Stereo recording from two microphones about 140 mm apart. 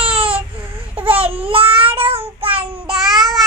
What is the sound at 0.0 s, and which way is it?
Baby cry, 40° right (ahead or behind).